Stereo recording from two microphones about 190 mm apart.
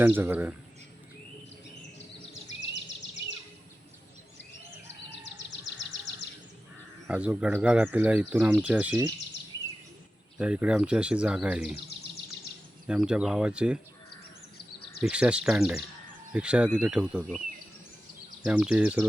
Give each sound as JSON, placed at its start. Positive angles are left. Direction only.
{"t": 0.0, "sound": "speech", "side_deg": -10}
{"t": 2.6, "sound": "a sound", "side_deg": 70}
{"t": 5.2, "sound": "music", "side_deg": 70}
{"t": 7.1, "sound": "speech", "side_deg": -5}
{"t": 10.3, "sound": "speech", "side_deg": -5}
{"t": 12.9, "sound": "speech", "side_deg": -5}
{"t": 15.0, "sound": "speech", "side_deg": -5}
{"t": 18.4, "sound": "speech", "side_deg": -5}